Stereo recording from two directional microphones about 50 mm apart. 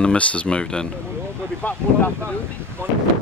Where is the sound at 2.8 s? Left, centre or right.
Right.